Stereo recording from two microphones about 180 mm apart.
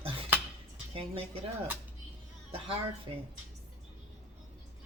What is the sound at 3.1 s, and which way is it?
Chopping, 30° right (ahead or behind).